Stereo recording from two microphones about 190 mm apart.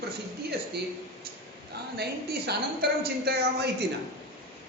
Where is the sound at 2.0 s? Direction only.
55° right (ahead or behind).